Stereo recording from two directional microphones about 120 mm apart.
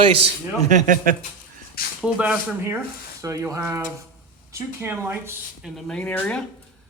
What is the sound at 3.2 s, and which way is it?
Speech, 25° right (ahead or behind).